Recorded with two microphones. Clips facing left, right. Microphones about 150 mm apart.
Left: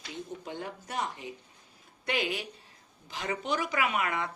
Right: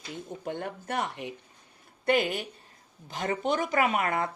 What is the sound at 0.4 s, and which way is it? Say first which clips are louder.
Speech: right 5 dB; 55° right (ahead or behind).